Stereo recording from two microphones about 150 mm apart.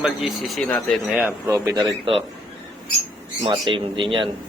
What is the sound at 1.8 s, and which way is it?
Speech, 30° right (ahead or behind).